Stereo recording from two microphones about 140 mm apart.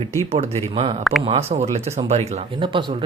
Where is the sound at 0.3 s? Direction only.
45° right (ahead or behind).